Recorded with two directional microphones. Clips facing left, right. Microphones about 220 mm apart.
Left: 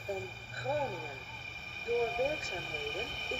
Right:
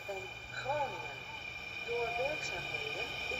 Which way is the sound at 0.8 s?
Centre (ahead or behind).